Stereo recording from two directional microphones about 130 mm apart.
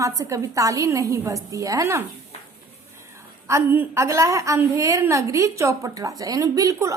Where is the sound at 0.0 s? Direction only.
25° right (ahead or behind).